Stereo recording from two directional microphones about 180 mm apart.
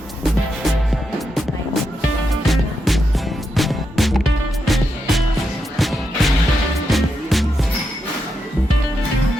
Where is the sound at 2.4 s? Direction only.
Centre (ahead or behind).